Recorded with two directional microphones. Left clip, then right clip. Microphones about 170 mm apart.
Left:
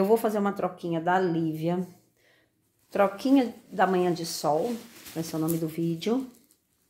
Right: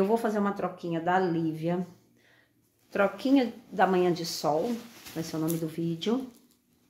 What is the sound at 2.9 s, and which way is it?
Speech, 30° left (ahead or behind).